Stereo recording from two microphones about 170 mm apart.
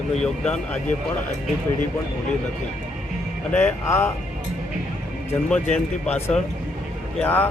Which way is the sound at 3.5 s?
15° left (ahead or behind).